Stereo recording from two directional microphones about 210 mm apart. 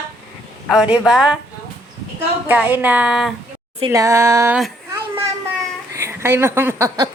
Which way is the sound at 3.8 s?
15° right (ahead or behind).